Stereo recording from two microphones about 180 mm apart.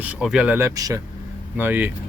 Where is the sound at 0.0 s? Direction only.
5° right (ahead or behind).